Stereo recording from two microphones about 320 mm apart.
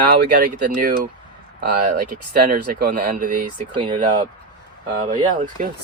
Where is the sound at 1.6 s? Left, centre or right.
Right.